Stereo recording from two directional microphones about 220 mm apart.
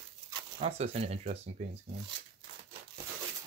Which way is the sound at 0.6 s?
30° right (ahead or behind).